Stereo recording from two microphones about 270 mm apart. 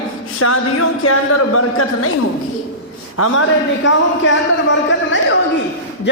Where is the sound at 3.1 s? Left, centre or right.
Left.